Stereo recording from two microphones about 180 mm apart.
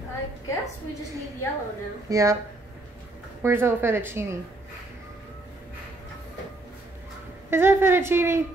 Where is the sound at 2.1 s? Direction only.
15° right (ahead or behind).